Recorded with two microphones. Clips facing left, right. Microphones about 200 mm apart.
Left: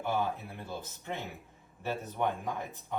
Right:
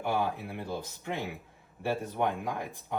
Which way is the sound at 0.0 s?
15° right (ahead or behind).